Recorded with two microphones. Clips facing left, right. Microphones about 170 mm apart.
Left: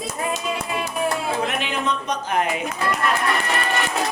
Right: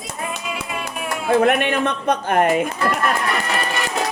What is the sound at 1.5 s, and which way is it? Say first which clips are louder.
Speech: right 6 dB; 60° right (ahead or behind).